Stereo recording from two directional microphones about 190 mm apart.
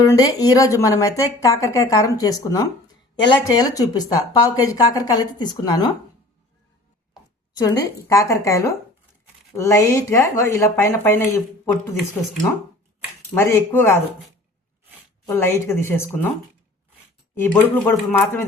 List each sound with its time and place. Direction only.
0.0 s speech: 20° left (ahead or behind)
7.1 s speech: 20° left (ahead or behind)
13.3 s speech: 15° left (ahead or behind)
15.3 s speech: 15° left (ahead or behind)
17.3 s speech: 10° left (ahead or behind)